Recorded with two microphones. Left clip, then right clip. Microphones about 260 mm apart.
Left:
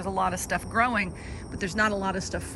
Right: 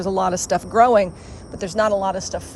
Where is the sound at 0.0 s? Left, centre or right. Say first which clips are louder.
Right 7 dB; right.